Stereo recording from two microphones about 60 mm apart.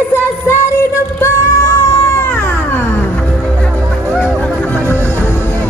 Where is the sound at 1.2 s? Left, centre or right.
Left.